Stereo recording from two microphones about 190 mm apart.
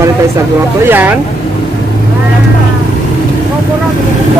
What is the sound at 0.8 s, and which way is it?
Speech, 10° right (ahead or behind).